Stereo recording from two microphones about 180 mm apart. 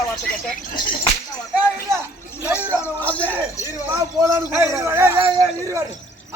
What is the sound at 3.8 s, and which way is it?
A man's voice, 15° right (ahead or behind).